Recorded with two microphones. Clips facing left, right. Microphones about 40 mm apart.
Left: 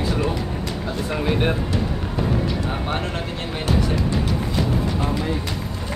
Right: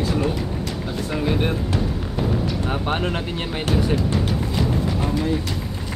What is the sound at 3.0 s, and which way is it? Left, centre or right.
Speech, right.